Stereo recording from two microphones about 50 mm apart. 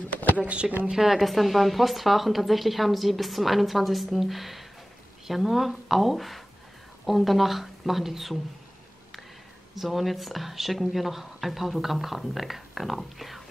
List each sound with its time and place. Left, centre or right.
0.4 s speech: right
0.8 s speech: centre
9.8 s speech: centre